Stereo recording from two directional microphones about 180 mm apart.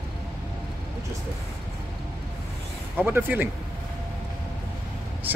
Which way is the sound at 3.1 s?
10° right (ahead or behind).